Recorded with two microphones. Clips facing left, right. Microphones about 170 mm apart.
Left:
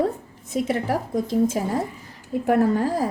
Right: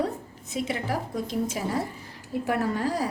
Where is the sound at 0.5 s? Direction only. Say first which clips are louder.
Left 6 dB; 50° left (ahead or behind).